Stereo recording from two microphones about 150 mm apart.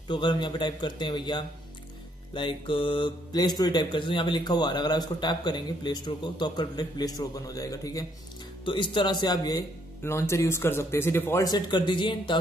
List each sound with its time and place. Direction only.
0.1 s speech: 30° left (ahead or behind)